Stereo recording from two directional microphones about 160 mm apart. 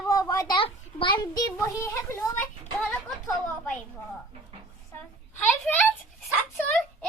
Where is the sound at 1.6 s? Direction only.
20° left (ahead or behind).